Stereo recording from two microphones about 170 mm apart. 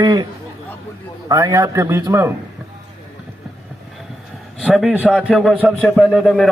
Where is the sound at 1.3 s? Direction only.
20° right (ahead or behind).